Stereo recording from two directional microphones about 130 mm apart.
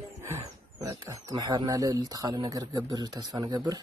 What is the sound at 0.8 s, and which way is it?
Speech, 30° right (ahead or behind).